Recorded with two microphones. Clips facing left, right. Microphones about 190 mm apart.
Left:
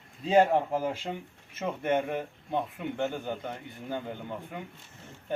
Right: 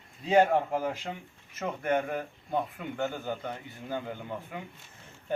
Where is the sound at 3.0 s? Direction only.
5° right (ahead or behind).